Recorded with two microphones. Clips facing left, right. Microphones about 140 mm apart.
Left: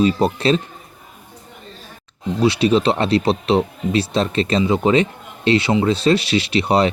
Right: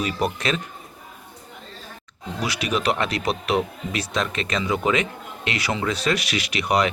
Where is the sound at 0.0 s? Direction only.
30° left (ahead or behind).